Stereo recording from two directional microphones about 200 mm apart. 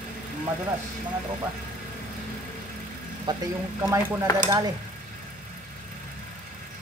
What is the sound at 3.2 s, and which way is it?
Speech, 15° right (ahead or behind).